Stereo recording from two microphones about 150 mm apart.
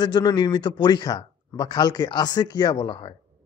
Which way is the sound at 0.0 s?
30° left (ahead or behind).